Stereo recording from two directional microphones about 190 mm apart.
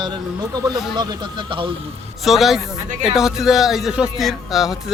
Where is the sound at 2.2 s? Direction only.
Centre (ahead or behind).